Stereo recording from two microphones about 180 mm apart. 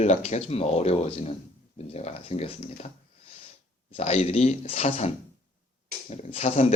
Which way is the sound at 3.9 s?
35° left (ahead or behind).